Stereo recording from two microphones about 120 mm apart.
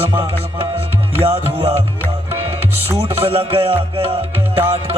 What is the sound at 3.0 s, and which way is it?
Music, 55° right (ahead or behind).